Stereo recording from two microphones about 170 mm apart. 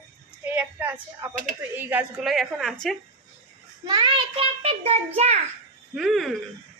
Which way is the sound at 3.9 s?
25° right (ahead or behind).